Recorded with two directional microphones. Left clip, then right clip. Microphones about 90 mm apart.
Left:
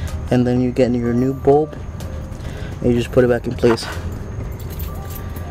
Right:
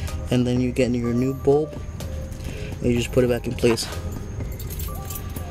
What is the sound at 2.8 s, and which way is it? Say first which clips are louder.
Speech: left 6 dB; 5° right (ahead or behind).